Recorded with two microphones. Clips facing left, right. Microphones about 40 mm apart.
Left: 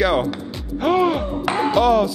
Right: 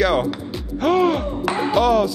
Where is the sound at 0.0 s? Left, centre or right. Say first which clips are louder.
Even; centre.